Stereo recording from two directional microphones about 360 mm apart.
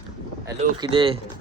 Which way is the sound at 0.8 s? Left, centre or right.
Centre.